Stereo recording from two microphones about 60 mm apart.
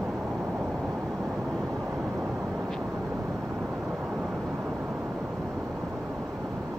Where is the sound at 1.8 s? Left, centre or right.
Right.